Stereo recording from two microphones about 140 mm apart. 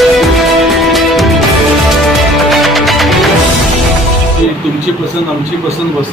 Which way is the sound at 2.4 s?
Centre (ahead or behind).